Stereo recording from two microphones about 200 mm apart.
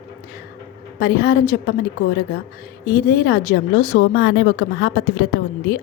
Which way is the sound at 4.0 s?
65° left (ahead or behind).